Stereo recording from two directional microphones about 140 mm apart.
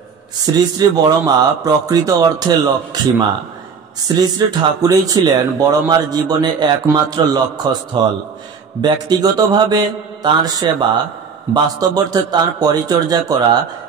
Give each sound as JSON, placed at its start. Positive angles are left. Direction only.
{"t": 0.5, "sound": "a man's voice", "side_deg": -30}